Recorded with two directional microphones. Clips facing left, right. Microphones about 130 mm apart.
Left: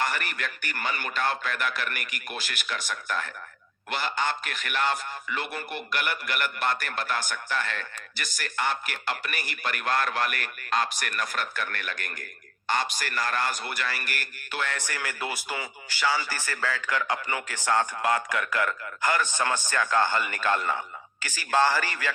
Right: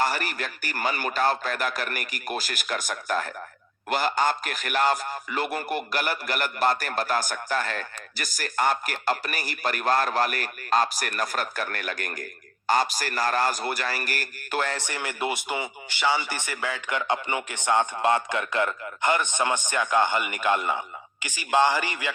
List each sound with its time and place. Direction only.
0.0 s a man's voice: 35° right (ahead or behind)
14.8 s a man's voice: 25° right (ahead or behind)